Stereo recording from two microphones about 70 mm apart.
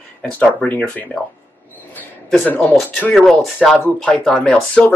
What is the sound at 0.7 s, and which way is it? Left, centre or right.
Speech, left.